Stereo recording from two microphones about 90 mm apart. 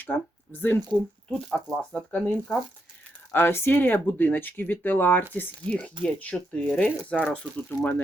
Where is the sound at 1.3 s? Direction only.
5° left (ahead or behind).